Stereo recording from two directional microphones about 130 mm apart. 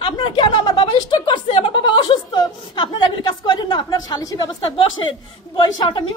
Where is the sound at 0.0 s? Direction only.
40° left (ahead or behind).